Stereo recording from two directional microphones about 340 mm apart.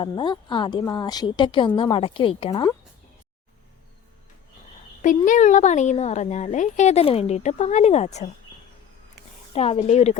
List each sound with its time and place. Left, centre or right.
0.0 s a woman's voice: centre
5.0 s a woman's voice: left
9.6 s a woman's voice: centre